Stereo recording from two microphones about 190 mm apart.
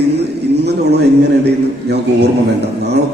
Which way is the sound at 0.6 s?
60° right (ahead or behind).